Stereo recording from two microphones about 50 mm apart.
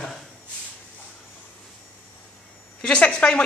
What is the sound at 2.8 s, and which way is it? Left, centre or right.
Speech, centre.